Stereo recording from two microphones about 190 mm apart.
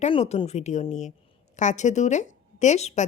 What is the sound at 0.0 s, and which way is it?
Speech, 35° left (ahead or behind).